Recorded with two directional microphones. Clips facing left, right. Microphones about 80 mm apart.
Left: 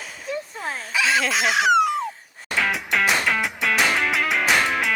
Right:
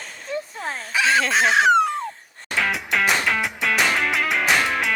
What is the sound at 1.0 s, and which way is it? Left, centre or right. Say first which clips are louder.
Speech: right 3 dB; right.